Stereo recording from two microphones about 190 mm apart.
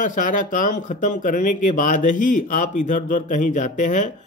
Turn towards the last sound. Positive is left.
turn(degrees=40)  # may be behind; listen again after turning